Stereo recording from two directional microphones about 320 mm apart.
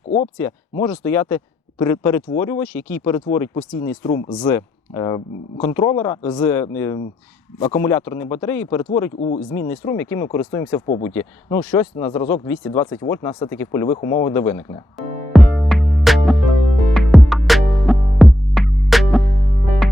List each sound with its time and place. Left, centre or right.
0.3 s speech: centre
16.9 s music: centre